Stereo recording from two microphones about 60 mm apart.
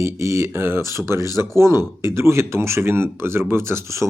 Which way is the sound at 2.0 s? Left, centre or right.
Right.